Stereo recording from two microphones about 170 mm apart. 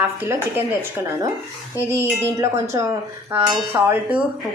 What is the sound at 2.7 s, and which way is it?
A woman's voice, 15° right (ahead or behind).